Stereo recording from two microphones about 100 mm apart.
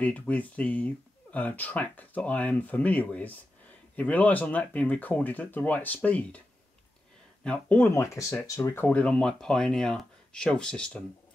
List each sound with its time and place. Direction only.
0.0 s speech: 15° left (ahead or behind)
7.4 s speech: 10° left (ahead or behind)
8.9 s speech: 10° left (ahead or behind)